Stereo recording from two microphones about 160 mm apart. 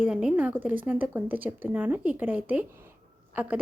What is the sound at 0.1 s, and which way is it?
Speech, 5° right (ahead or behind).